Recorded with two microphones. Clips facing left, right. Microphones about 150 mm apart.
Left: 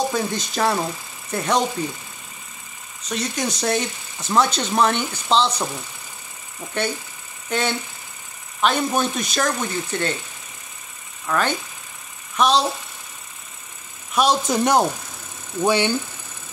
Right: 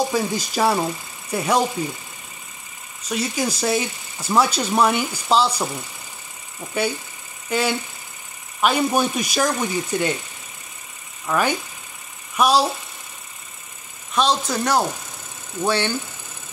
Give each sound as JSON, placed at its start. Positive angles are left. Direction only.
{"t": 0.1, "sound": "speech", "side_deg": -5}
{"t": 3.1, "sound": "speech", "side_deg": -5}
{"t": 11.2, "sound": "speech", "side_deg": -10}
{"t": 14.1, "sound": "speech", "side_deg": 15}